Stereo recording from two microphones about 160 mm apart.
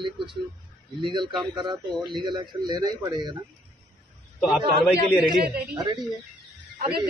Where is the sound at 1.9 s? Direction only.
Centre (ahead or behind).